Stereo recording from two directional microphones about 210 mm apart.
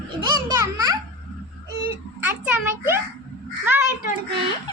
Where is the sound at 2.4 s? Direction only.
10° right (ahead or behind).